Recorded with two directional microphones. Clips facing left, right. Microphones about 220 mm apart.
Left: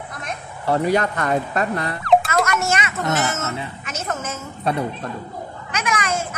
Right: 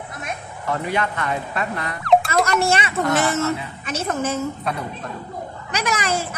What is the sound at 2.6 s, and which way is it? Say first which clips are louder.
Speech: right 3 dB; 30° right (ahead or behind).